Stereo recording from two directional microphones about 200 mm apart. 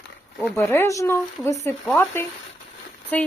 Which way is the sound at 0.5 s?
10° left (ahead or behind).